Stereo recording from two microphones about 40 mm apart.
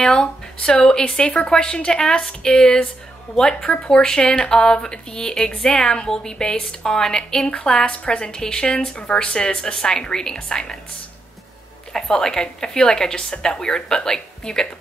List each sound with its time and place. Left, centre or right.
0.1 s speech: left
3.7 s speech: left
7.7 s speech: left
11.9 s speech: centre